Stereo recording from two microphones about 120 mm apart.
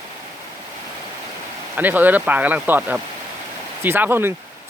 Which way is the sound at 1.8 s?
15° right (ahead or behind).